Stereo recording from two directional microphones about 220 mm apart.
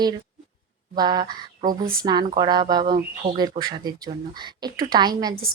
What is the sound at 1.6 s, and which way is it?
Speech, 40° right (ahead or behind).